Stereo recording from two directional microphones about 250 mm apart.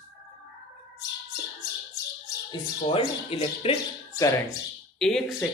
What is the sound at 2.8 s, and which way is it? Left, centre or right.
Speech, left.